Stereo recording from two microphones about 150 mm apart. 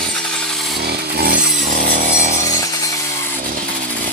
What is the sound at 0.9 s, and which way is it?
Wood, 85° right.